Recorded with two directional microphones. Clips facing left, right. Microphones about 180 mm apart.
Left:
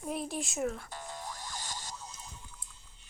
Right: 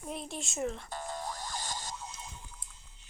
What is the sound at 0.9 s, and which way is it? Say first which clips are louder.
Music: right 4 dB; 50° right (ahead or behind).